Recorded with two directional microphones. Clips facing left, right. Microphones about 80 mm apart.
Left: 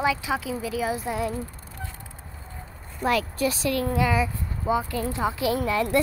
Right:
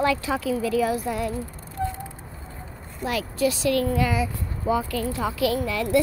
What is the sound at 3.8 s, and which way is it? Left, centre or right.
A woman's voice, left.